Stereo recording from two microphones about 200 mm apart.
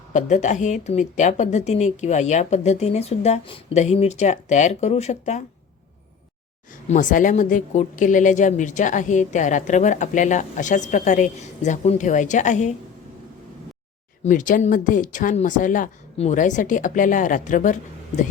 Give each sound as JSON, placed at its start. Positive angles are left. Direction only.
{"t": 0.1, "sound": "a woman's voice", "side_deg": 35}
{"t": 6.8, "sound": "a woman's voice", "side_deg": 40}
{"t": 14.3, "sound": "a woman's voice", "side_deg": 40}